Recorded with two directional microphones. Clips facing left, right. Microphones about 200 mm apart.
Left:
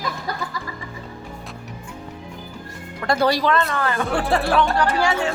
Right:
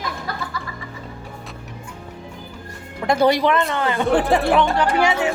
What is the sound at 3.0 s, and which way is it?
Speech, 20° right (ahead or behind).